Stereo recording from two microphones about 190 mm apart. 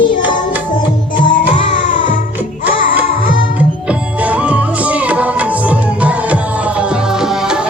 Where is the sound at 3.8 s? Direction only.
5° right (ahead or behind).